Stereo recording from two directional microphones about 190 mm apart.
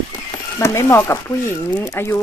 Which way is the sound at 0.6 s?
15° left (ahead or behind).